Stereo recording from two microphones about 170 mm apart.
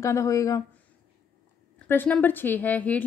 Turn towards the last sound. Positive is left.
turn(degrees=10)  # may be behind; listen again after turning